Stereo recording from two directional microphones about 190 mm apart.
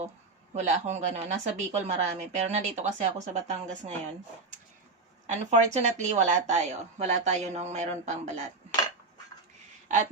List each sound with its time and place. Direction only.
0.5 s a woman's voice: 40° right (ahead or behind)
5.2 s a woman's voice: 35° right (ahead or behind)